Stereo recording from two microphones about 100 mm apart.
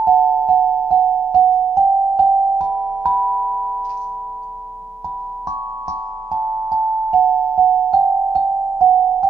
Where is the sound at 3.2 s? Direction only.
20° right (ahead or behind).